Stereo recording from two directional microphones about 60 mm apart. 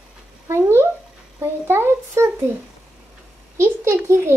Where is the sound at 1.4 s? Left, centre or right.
Right.